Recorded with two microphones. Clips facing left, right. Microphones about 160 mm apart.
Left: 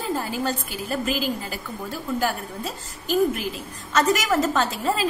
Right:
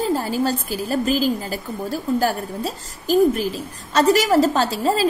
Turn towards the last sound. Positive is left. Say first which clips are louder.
# right 4 dB
turn(degrees=-35)  # may be behind; listen again after turning